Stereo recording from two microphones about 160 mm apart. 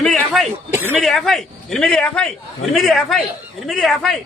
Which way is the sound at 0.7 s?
15° right (ahead or behind).